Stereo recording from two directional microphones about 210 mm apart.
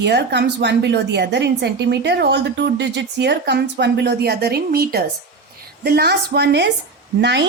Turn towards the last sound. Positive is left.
turn(degrees=-55)  # may be behind; listen again after turning